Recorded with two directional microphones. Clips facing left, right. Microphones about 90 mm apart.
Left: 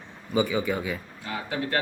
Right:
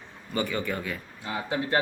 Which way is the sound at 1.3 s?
25° right (ahead or behind).